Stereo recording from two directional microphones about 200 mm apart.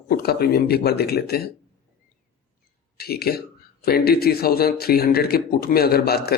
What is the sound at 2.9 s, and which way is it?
Speech, 50° left (ahead or behind).